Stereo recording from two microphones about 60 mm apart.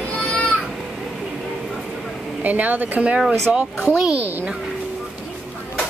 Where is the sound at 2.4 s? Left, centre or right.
Right.